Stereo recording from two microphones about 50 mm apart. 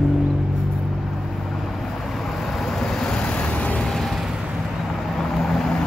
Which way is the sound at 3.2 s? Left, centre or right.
Left.